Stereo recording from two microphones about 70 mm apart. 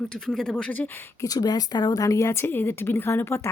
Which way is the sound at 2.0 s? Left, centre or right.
Left.